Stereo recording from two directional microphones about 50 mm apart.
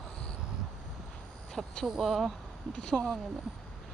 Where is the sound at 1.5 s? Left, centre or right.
Centre.